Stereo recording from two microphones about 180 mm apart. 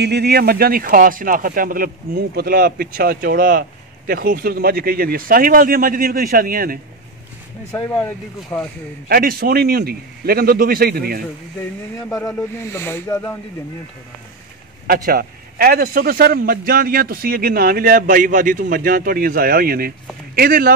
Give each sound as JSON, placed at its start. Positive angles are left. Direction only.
{"t": 0.0, "sound": "a man's voice", "side_deg": -65}
{"t": 8.0, "sound": "speech", "side_deg": 15}
{"t": 9.1, "sound": "a man's voice", "side_deg": -55}
{"t": 12.4, "sound": "speech", "side_deg": 15}
{"t": 14.9, "sound": "a man's voice", "side_deg": -55}